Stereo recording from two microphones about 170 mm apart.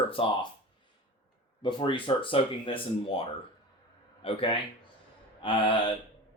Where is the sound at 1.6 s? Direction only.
30° left (ahead or behind).